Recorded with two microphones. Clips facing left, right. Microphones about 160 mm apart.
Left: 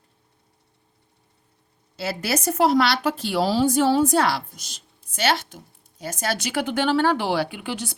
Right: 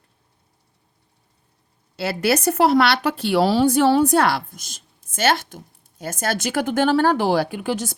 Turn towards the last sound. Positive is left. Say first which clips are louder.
# right 6 dB
turn(degrees=-45)  # may be behind; listen again after turning